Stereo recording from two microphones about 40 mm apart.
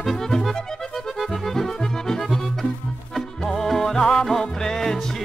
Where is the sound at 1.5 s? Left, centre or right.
Centre.